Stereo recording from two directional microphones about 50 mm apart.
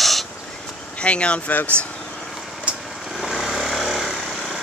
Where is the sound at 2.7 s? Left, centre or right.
Right.